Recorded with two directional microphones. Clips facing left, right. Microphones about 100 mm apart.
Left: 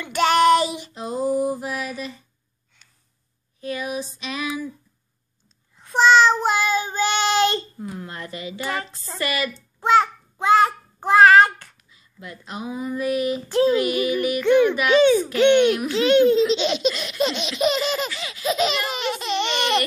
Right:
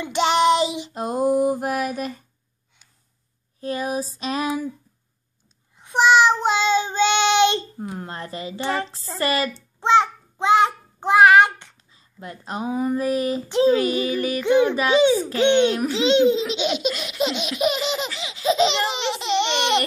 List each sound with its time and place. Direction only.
0.0 s child singing: 20° right (ahead or behind)
0.9 s mantra: 50° right (ahead or behind)
3.6 s a woman's voice: 40° right (ahead or behind)
5.8 s a sound: 15° right (ahead or behind)
6.4 s child singing: 25° right (ahead or behind)
7.9 s a woman's voice: 35° right (ahead or behind)
9.8 s a child's voice: 20° right (ahead or behind)
11.9 s speech: 35° right (ahead or behind)
13.5 s laughter: 20° right (ahead or behind)
13.7 s a woman's voice: 30° right (ahead or behind)
14.4 s a child's voice: 15° right (ahead or behind)
15.3 s laughter: 20° right (ahead or behind)
15.9 s a child's voice: 20° right (ahead or behind)
16.5 s laughter: 10° right (ahead or behind)